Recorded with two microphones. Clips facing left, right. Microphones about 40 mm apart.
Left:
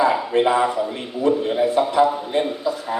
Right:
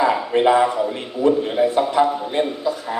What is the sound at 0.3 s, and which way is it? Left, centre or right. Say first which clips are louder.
Speech: right 3 dB; right.